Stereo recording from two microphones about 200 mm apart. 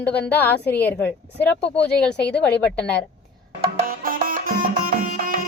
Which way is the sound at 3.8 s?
45° right (ahead or behind).